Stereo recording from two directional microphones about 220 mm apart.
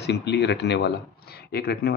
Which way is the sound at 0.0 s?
50° left (ahead or behind).